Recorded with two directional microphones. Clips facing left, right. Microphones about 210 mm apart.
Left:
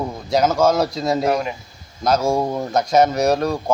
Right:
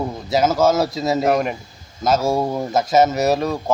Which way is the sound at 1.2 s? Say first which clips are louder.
Right 4 dB; 50° right (ahead or behind).